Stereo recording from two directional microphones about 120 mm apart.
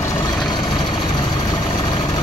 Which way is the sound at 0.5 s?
35° left (ahead or behind).